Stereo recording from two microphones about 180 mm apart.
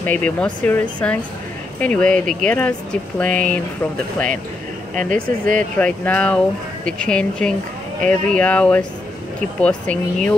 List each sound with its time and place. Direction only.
0.0 s speech: 10° left (ahead or behind)
4.9 s speech: 50° right (ahead or behind)
5.8 s speech: 5° left (ahead or behind)